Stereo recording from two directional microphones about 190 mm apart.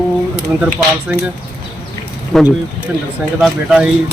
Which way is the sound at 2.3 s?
Centre (ahead or behind).